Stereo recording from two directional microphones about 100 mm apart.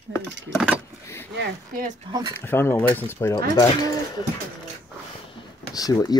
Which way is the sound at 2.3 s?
25° left (ahead or behind).